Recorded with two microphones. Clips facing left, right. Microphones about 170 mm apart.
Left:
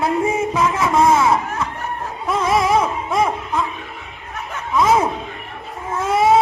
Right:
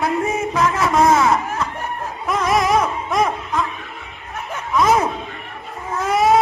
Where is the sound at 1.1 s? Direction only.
10° left (ahead or behind).